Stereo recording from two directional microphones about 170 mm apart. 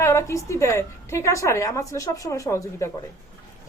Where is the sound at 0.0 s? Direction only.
15° left (ahead or behind).